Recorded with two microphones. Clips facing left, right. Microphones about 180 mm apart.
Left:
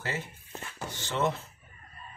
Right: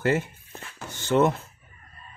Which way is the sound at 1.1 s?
50° right (ahead or behind).